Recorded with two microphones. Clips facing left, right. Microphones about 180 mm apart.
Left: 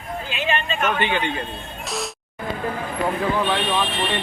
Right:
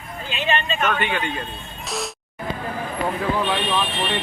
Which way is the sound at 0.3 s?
5° left (ahead or behind).